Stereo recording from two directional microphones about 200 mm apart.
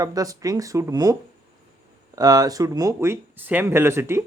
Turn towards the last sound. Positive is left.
turn(degrees=-10)  # may be behind; listen again after turning